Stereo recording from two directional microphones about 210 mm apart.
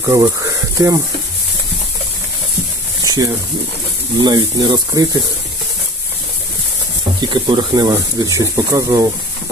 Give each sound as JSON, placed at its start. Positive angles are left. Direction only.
{"t": 0.0, "sound": "speech", "side_deg": -15}
{"t": 3.0, "sound": "a sound", "side_deg": -20}
{"t": 4.2, "sound": "speech", "side_deg": -20}
{"t": 7.2, "sound": "speech", "side_deg": -20}